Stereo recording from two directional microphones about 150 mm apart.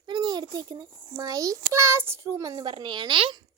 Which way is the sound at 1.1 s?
25° right (ahead or behind).